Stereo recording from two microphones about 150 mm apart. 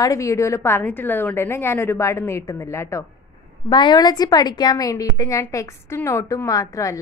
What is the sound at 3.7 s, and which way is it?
A woman's voice, 30° left (ahead or behind).